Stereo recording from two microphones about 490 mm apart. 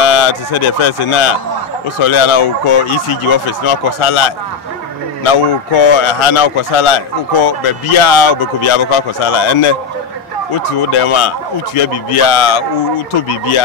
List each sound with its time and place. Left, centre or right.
0.0 s speech: left
10.9 s speech: left